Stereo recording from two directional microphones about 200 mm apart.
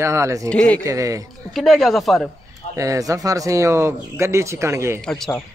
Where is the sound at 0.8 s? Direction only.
15° right (ahead or behind).